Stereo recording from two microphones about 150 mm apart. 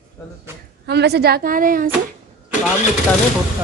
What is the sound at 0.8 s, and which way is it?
A woman's voice, 90° right.